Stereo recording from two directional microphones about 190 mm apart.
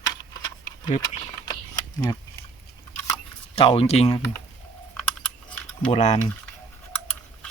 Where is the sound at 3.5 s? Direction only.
30° left (ahead or behind).